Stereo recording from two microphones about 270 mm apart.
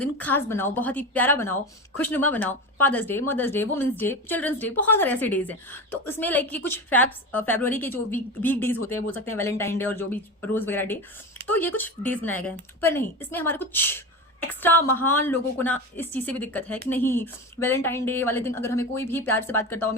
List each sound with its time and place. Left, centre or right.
0.0 s a woman's voice: centre